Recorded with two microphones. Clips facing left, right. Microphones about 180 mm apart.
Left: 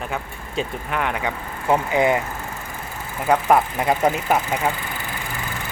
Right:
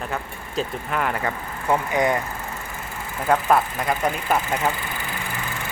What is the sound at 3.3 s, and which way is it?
Speech, 15° left (ahead or behind).